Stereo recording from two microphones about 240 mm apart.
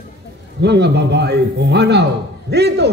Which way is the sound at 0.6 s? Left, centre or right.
Right.